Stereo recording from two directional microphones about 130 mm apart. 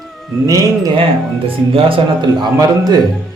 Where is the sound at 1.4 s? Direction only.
45° right (ahead or behind).